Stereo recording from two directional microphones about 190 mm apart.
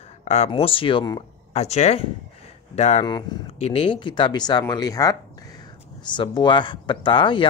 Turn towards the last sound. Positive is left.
turn(degrees=25)  # may be behind; listen again after turning